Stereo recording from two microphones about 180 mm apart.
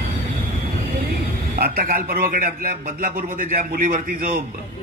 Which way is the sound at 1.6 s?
55° right (ahead or behind).